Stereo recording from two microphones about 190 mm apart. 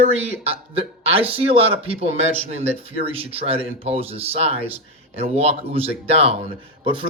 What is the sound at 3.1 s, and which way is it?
Speech, 30° right (ahead or behind).